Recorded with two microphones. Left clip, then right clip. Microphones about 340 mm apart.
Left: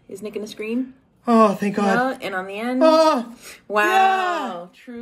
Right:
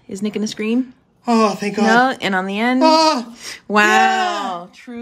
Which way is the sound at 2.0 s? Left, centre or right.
Right.